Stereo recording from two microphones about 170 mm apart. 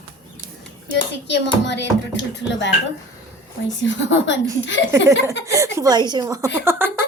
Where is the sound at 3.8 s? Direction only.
90° left.